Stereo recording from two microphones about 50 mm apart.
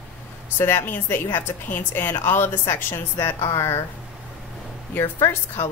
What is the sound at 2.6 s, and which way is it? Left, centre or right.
A woman's voice, left.